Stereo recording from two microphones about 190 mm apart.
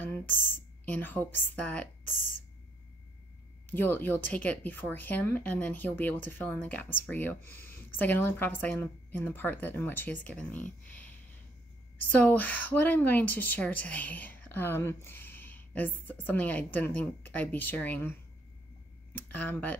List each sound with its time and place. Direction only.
0.0 s speech: 10° left (ahead or behind)
3.6 s speech: 10° left (ahead or behind)
12.1 s speech: 10° left (ahead or behind)
19.1 s speech: 10° left (ahead or behind)